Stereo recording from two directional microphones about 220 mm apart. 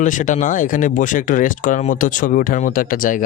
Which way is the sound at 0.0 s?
35° left (ahead or behind).